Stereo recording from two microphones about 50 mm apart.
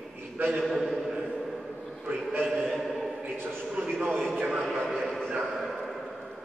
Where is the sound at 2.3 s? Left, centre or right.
Centre.